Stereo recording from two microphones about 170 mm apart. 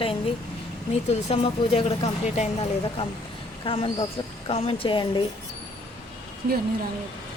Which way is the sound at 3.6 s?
30° left (ahead or behind).